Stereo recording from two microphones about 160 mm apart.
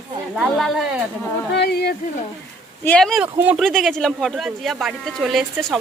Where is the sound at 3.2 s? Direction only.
10° right (ahead or behind).